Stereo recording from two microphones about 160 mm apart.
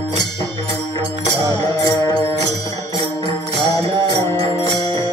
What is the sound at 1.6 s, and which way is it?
Music, 25° left (ahead or behind).